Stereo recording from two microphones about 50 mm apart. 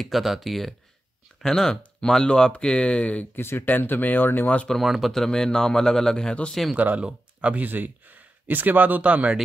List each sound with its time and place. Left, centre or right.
0.0 s speech: centre
1.4 s speech: centre
3.3 s speech: left
4.6 s speech: centre
7.0 s speech: right
7.6 s speech: right